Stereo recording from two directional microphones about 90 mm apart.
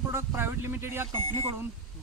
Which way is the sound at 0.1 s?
30° right (ahead or behind).